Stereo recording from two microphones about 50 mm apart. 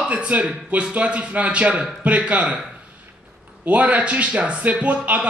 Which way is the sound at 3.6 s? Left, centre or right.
Right.